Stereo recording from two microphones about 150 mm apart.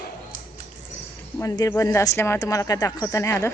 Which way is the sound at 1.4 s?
20° left (ahead or behind).